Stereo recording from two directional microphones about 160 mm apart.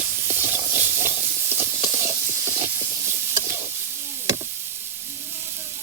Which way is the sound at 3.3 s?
15° right (ahead or behind).